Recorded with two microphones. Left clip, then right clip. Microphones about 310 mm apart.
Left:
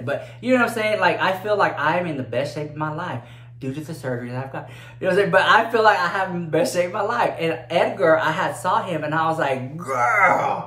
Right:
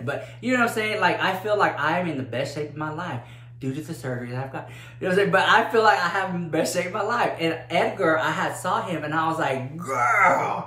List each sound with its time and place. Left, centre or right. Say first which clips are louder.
0.0 s speech: left 3 dB; centre